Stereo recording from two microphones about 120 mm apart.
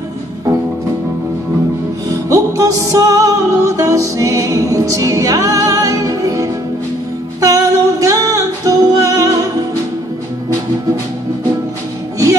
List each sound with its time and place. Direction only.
2.0 s music: 25° right (ahead or behind)